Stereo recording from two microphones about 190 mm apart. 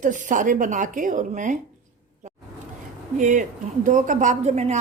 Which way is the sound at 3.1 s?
40° right (ahead or behind).